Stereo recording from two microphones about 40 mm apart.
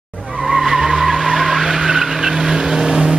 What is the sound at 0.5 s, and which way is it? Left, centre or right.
Vehicle, centre.